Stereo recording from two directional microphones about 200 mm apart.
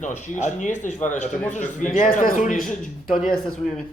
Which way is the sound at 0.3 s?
40° left (ahead or behind).